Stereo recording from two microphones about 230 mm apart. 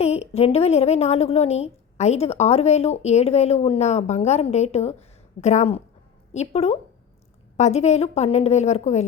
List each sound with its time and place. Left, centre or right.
0.0 s a woman's voice: left